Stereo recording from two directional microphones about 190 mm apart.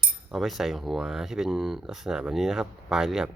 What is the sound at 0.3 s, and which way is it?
Speech, centre (ahead or behind).